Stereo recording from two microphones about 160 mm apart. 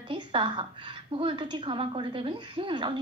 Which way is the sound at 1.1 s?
30° right (ahead or behind).